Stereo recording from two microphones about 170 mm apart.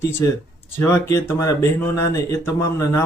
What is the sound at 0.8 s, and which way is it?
Speech, 15° left (ahead or behind).